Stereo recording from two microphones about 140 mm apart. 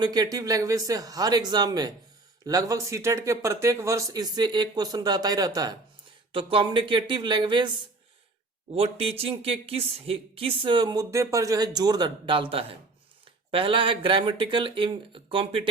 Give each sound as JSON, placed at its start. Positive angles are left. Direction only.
{"t": 0.0, "sound": "speech", "side_deg": -30}
{"t": 6.3, "sound": "speech", "side_deg": -35}
{"t": 8.7, "sound": "speech", "side_deg": -45}